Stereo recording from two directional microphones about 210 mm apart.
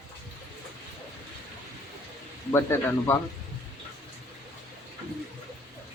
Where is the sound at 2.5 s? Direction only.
10° left (ahead or behind).